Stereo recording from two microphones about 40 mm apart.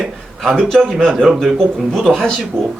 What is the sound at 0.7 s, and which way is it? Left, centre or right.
A man's voice, centre.